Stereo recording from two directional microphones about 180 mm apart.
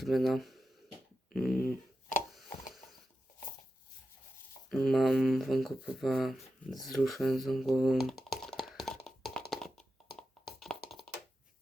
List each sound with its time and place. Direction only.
0.0 s speech: centre (ahead or behind)
1.3 s dog: centre (ahead or behind)
4.7 s speech: centre (ahead or behind)
8.3 s a sound: centre (ahead or behind)
10.4 s music: centre (ahead or behind)
11.0 s a sound: 60° left (ahead or behind)